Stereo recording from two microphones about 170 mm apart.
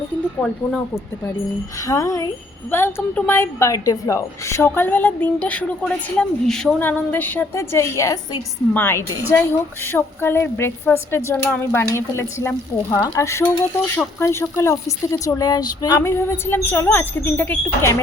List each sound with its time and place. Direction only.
0.3 s a woman's voice: 10° left (ahead or behind)